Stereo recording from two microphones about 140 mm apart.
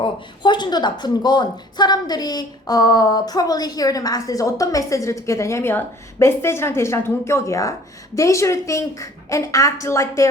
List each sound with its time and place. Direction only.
0.0 s speech: 35° left (ahead or behind)